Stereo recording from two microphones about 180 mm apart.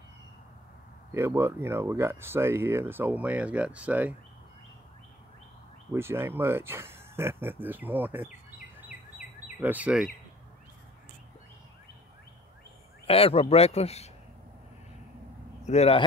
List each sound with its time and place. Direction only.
1.1 s speech: 15° right (ahead or behind)
5.9 s speech: 15° right (ahead or behind)
9.6 s speech: 10° right (ahead or behind)
13.0 s speech: 30° left (ahead or behind)
15.6 s a man's voice: 35° left (ahead or behind)